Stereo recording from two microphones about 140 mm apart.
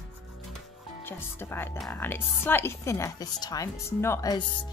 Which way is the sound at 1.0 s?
15° left (ahead or behind).